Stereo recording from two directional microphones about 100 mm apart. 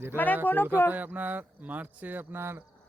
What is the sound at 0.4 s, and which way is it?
Speech, 20° left (ahead or behind).